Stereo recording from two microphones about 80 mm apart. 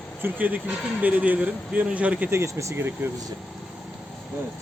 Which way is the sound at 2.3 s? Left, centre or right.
Right.